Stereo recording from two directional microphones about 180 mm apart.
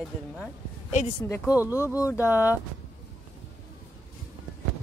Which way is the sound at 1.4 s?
10° right (ahead or behind).